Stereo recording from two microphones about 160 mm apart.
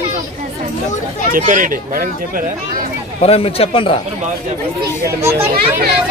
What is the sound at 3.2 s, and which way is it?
Speech, 40° left (ahead or behind).